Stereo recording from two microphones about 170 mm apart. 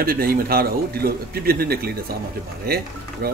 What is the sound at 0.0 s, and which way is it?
Speech, 60° right (ahead or behind).